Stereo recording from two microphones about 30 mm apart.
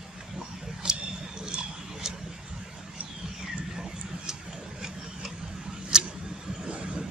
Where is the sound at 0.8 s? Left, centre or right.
Right.